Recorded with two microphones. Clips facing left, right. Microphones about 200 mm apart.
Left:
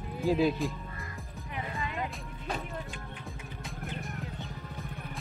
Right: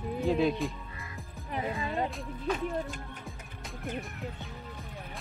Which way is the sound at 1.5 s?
35° right (ahead or behind).